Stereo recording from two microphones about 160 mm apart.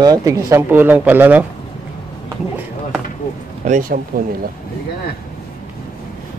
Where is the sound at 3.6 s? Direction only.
55° right (ahead or behind).